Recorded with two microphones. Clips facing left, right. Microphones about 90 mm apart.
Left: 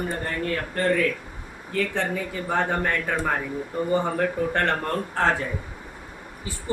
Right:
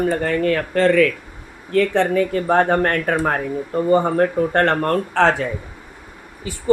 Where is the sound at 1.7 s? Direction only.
65° right (ahead or behind).